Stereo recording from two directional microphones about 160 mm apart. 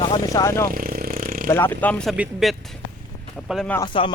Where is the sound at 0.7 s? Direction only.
65° right (ahead or behind).